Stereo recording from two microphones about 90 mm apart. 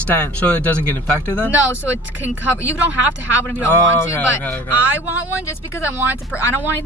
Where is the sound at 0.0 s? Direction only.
15° left (ahead or behind).